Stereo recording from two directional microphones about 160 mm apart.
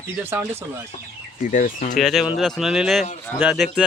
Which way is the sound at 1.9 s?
Centre (ahead or behind).